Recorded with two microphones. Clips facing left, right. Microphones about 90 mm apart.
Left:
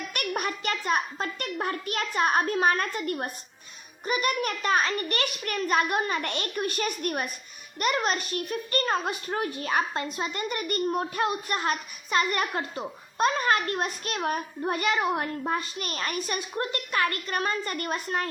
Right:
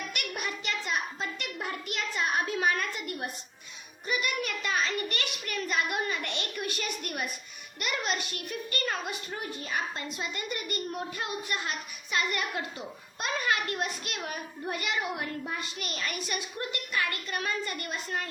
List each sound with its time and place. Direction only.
0.1 s a child's voice: 50° left (ahead or behind)
9.0 s a woman's voice: 55° left (ahead or behind)